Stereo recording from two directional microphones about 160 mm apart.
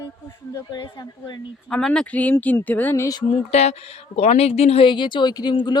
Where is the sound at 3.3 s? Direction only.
40° left (ahead or behind).